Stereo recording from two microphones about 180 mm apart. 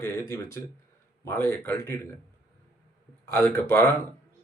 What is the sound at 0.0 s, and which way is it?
Speech, 15° left (ahead or behind).